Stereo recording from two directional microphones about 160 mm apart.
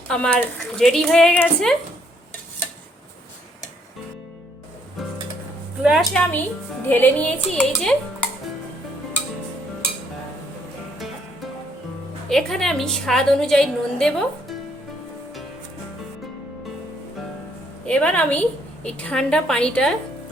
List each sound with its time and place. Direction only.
0.1 s a woman's voice: 10° left (ahead or behind)
5.8 s a woman's voice: centre (ahead or behind)
6.8 s a woman's voice: 10° left (ahead or behind)
12.3 s a woman's voice: centre (ahead or behind)
17.8 s a woman's voice: 10° left (ahead or behind)